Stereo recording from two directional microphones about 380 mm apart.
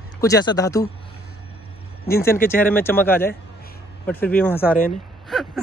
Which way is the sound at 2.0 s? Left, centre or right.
Left.